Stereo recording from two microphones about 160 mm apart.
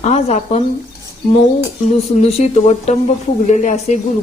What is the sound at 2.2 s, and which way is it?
Speech, 40° left (ahead or behind).